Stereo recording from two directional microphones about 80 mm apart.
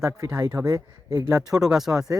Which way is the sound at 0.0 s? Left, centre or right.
Right.